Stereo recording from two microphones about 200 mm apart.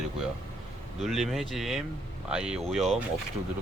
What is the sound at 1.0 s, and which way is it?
Speech, centre (ahead or behind).